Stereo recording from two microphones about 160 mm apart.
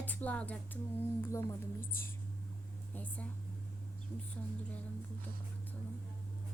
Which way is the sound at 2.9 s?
10° left (ahead or behind).